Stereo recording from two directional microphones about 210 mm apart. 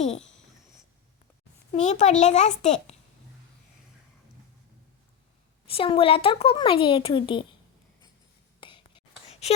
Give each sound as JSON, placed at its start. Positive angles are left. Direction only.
{"t": 1.7, "sound": "a child's voice", "side_deg": 35}
{"t": 5.6, "sound": "a woman's voice", "side_deg": 25}
{"t": 8.6, "sound": "whispering", "side_deg": 25}